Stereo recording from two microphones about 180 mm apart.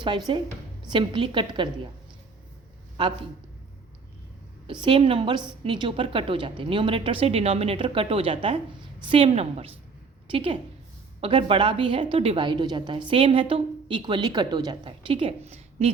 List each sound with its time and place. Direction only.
0.3 s a woman's voice: 25° right (ahead or behind)
4.6 s a woman's voice: 25° right (ahead or behind)